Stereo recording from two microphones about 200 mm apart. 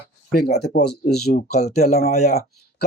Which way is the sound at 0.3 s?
55° left (ahead or behind).